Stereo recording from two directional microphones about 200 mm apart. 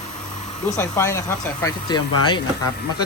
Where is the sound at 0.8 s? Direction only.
15° left (ahead or behind).